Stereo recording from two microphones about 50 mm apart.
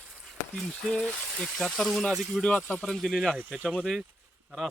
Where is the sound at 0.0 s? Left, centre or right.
Right.